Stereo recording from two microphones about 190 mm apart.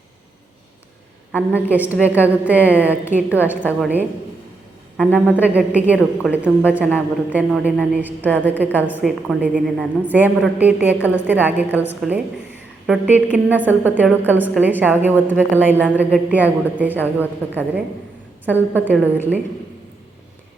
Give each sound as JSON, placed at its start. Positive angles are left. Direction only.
{"t": 1.3, "sound": "a woman's voice", "side_deg": -10}